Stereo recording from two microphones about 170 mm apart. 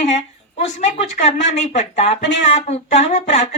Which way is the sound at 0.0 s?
40° left (ahead or behind).